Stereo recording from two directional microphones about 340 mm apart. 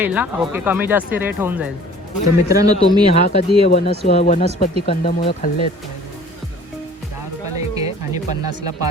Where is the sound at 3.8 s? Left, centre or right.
Centre.